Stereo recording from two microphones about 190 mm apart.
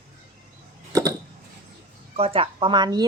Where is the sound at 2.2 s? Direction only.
30° right (ahead or behind).